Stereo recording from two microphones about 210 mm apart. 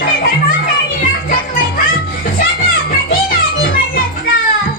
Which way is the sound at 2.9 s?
45° left (ahead or behind).